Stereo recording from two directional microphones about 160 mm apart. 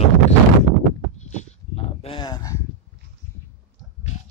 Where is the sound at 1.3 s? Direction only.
40° left (ahead or behind).